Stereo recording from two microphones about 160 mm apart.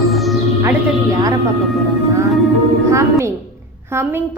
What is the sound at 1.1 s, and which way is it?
Speech, 20° right (ahead or behind).